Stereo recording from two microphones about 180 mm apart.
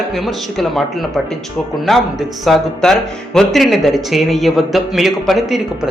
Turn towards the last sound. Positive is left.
turn(degrees=0)  # may be behind; listen again after turning